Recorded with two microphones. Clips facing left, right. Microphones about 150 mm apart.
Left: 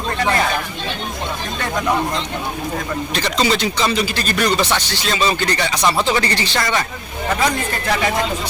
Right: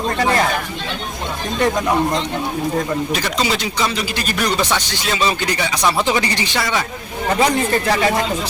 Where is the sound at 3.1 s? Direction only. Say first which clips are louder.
Left 2 dB; 5° right (ahead or behind).